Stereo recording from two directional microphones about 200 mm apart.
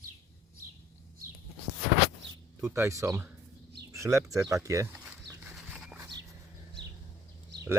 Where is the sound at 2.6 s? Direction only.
10° right (ahead or behind).